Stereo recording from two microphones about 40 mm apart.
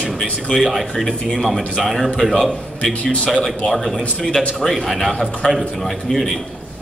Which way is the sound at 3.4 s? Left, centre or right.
Centre.